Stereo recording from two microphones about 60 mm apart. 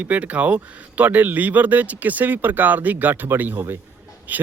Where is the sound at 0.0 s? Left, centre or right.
Right.